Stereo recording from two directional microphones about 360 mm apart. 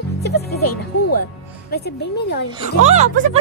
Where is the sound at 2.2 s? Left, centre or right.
Left.